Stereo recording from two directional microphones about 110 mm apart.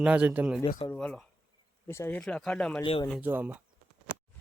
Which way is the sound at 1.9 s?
25° left (ahead or behind).